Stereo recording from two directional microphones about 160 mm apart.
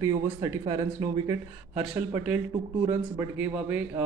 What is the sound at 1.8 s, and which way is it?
A man's voice, 10° right (ahead or behind).